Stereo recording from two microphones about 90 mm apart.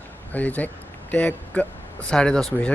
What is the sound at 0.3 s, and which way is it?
Speech, 20° left (ahead or behind).